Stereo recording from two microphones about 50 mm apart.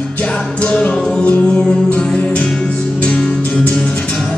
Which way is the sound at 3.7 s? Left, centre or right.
Centre.